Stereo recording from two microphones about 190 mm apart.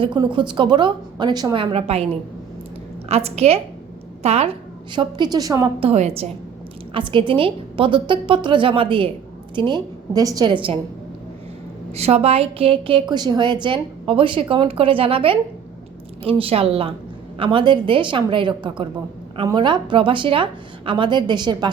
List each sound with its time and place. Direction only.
0.0 s a woman's voice: 25° right (ahead or behind)
3.1 s a woman's voice: 35° right (ahead or behind)
4.9 s a woman's voice: 25° right (ahead or behind)
5.8 s a woman's voice: 35° right (ahead or behind)
11.9 s a woman's voice: 35° right (ahead or behind)
16.4 s a woman's voice: 30° right (ahead or behind)